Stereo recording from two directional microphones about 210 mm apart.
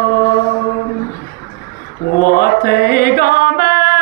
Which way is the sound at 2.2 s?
45° left (ahead or behind).